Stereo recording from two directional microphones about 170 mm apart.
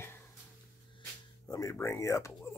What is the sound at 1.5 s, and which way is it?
Speech, 20° left (ahead or behind).